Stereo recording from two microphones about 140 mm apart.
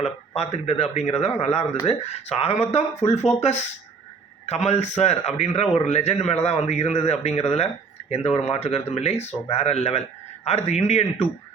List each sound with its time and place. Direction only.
0.0 s a man's voice: 50° left (ahead or behind)